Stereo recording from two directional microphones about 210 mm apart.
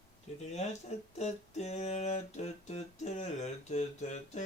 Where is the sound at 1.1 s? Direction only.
35° left (ahead or behind).